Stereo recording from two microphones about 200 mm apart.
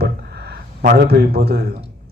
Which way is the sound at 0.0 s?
55° right (ahead or behind).